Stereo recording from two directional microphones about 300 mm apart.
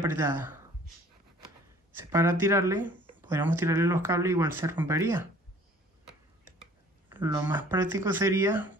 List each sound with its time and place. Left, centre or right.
0.0 s speech: centre
2.0 s speech: centre
7.1 s speech: centre